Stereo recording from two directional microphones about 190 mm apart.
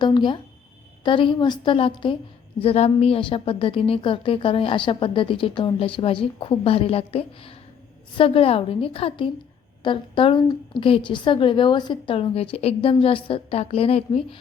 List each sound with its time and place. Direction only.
0.0 s a woman's voice: 25° left (ahead or behind)